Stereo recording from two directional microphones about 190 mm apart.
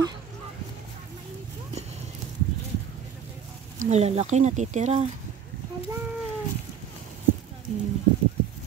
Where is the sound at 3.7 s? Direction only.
35° right (ahead or behind).